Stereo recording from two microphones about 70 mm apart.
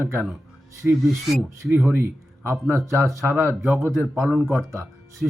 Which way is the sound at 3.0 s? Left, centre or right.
Centre.